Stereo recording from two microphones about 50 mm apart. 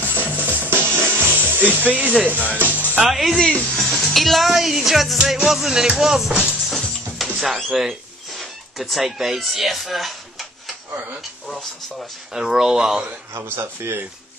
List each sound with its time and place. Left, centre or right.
0.1 s music: right
1.5 s speech: left
1.9 s speech: right
3.1 s music: centre
3.3 s speech: left
3.7 s speech: centre
5.2 s music: centre
5.9 s speech: centre
12.4 s speech: centre